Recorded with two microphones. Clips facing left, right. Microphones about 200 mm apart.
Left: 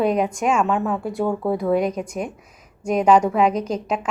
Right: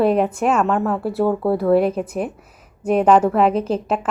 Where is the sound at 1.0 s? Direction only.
5° right (ahead or behind).